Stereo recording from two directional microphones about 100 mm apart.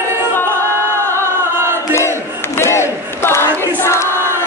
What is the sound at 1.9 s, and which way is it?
Battle cry, 25° left (ahead or behind).